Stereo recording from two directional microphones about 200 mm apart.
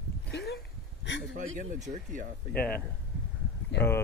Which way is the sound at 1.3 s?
40° right (ahead or behind).